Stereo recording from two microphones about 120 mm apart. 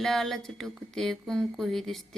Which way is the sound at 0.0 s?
Centre (ahead or behind).